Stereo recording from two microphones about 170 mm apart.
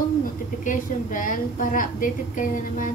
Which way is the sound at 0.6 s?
50° left (ahead or behind).